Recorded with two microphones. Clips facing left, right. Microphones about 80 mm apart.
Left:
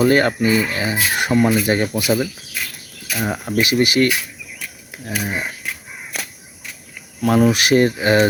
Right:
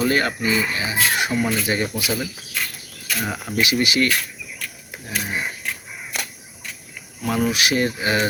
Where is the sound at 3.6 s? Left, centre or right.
Left.